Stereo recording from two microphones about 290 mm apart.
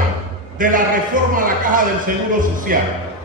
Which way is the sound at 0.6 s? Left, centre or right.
Right.